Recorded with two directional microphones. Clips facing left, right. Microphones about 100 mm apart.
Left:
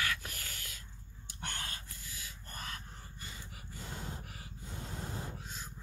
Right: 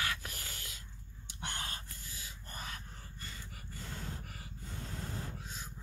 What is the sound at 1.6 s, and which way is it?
Gasp, 30° right (ahead or behind).